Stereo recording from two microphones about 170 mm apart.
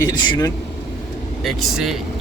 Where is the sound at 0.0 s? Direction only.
25° left (ahead or behind).